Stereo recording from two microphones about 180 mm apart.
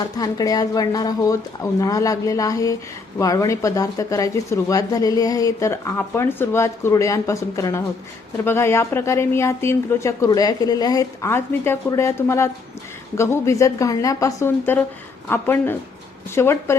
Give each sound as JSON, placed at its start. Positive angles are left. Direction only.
{"t": 0.2, "sound": "a woman's voice", "side_deg": 20}